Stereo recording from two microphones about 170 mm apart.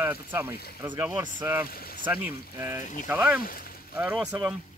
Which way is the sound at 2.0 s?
10° right (ahead or behind).